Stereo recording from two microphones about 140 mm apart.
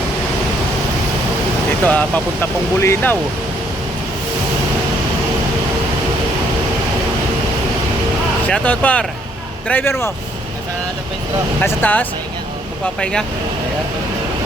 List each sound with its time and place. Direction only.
1.8 s speech: 10° left (ahead or behind)
8.4 s speech: 10° left (ahead or behind)
11.6 s speech: 15° left (ahead or behind)